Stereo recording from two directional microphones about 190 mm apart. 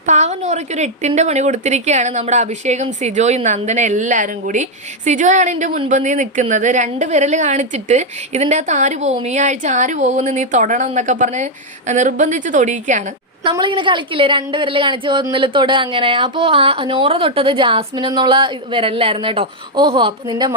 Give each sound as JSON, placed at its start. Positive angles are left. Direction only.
{"t": 0.0, "sound": "a woman's voice", "side_deg": -40}
{"t": 13.4, "sound": "a woman's voice", "side_deg": -25}